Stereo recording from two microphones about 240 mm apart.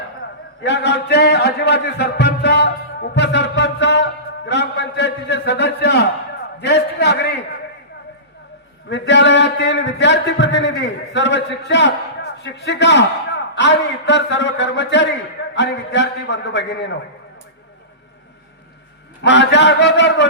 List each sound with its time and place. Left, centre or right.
0.6 s a man's voice: left
8.9 s a man's voice: left
19.2 s a man's voice: left